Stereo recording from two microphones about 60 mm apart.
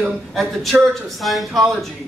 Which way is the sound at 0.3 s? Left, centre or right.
Centre.